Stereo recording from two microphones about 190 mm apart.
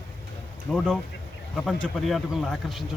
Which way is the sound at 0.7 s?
5° left (ahead or behind).